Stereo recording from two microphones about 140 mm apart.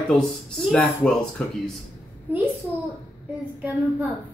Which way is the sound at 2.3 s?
15° right (ahead or behind).